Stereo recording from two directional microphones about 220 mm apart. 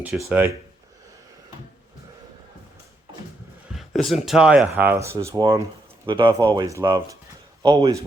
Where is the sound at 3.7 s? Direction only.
Centre (ahead or behind); by 8.1 s 15° right (ahead or behind).